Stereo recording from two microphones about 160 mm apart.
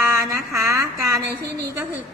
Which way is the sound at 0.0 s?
20° right (ahead or behind).